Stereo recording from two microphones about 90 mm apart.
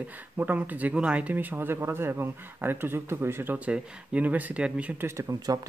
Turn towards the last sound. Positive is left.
turn(degrees=-40)  # may be behind; listen again after turning